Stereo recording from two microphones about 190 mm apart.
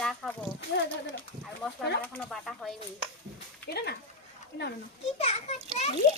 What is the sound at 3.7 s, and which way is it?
Speech, 60° left (ahead or behind).